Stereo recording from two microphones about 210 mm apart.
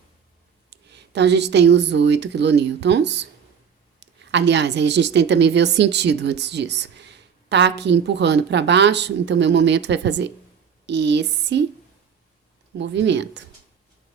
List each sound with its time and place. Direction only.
0.7 s a woman's voice: 55° right (ahead or behind)
12.7 s a woman's voice: 55° right (ahead or behind)